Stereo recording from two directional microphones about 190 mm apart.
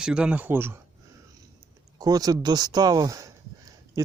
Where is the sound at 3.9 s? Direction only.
15° right (ahead or behind).